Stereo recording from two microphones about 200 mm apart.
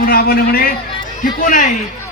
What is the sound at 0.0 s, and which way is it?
A man's voice, 50° left (ahead or behind).